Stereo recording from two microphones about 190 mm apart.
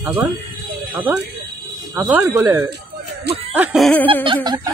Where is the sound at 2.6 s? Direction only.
60° right (ahead or behind).